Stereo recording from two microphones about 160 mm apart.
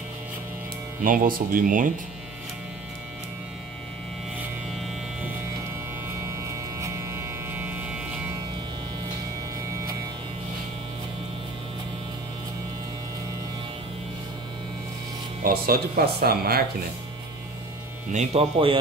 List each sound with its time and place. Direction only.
1.0 s speech: 60° right (ahead or behind)
6.8 s a sound: 15° right (ahead or behind)
15.4 s speech: 70° right (ahead or behind)
18.1 s speech: 40° right (ahead or behind)